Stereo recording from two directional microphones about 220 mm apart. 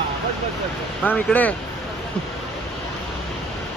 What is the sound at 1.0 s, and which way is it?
Speech, 5° left (ahead or behind).